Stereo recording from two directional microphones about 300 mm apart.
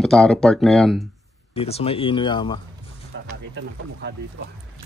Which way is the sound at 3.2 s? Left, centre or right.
Right.